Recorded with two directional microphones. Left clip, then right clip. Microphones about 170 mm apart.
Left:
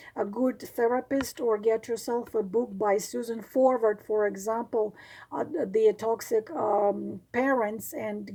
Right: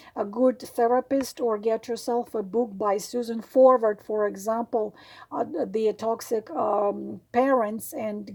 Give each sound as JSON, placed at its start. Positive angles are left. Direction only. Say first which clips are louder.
{"t": 0.2, "sound": "speech", "louder": "right 5 dB", "side_deg": -25}